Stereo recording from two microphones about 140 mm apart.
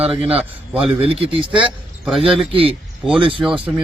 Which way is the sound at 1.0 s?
40° right (ahead or behind).